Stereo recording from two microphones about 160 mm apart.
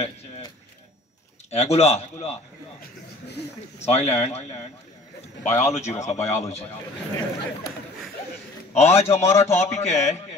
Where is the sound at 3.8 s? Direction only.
40° left (ahead or behind).